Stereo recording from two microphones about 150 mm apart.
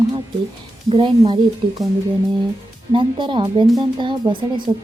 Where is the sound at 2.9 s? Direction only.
35° right (ahead or behind).